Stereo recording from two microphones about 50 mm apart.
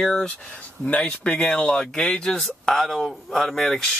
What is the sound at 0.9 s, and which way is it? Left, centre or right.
Speech, left.